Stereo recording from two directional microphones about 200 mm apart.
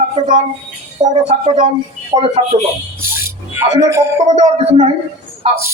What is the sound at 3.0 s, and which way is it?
Speech, 10° right (ahead or behind).